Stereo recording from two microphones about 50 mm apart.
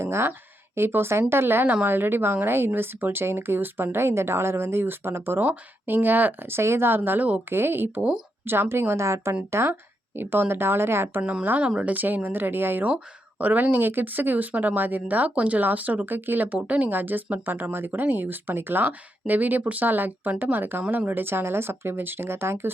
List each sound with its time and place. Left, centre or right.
0.0 s speech: right
0.8 s speech: right
7.5 s speech: right
9.0 s a woman's voice: right
9.5 s speech: right
10.2 s speech: right
11.6 s speech: right
13.4 s speech: right
17.5 s speech: right